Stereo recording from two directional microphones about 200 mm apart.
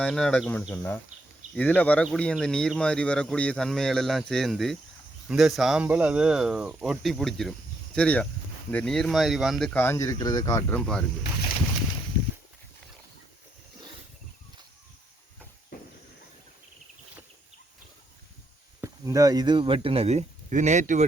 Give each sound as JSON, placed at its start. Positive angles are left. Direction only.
{"t": 0.0, "sound": "speech", "side_deg": 5}
{"t": 18.8, "sound": "speech", "side_deg": -15}